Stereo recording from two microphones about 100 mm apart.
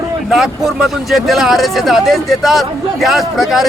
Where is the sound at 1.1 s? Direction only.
Centre (ahead or behind).